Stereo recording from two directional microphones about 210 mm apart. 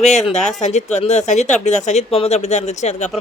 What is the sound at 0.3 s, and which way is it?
Speech, centre (ahead or behind).